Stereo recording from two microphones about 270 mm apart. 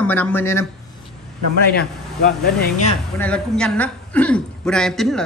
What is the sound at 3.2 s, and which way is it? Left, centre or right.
A woman's voice, centre.